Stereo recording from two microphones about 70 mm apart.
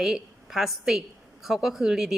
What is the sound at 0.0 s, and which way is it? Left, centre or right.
A woman's voice, centre.